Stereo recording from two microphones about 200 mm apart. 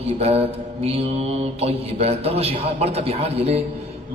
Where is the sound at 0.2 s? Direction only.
30° right (ahead or behind).